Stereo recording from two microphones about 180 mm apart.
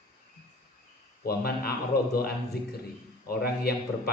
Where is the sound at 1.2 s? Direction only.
60° left (ahead or behind).